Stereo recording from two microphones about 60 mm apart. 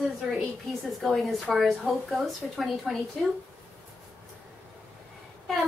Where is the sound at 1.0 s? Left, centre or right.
Centre.